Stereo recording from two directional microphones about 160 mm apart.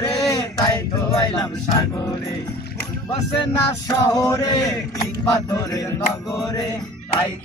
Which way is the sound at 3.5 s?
20° left (ahead or behind).